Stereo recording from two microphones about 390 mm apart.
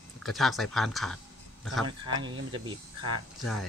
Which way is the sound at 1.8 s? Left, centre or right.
Centre.